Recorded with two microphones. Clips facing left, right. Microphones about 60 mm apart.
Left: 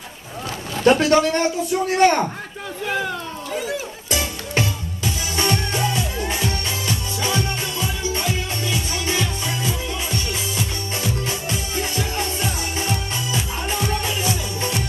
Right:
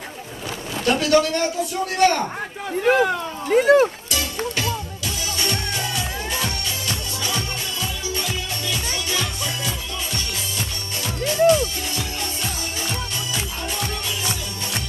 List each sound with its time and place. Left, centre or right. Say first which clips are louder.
0.8 s a man's voice: left 3 dB; left
2.8 s speech: right 7 dB; right
4.1 s music: left 1 dB; left
11.0 s music: right 8 dB; left